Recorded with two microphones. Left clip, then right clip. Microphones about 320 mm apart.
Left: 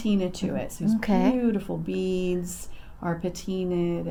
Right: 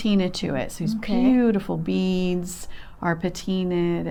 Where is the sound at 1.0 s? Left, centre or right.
Left.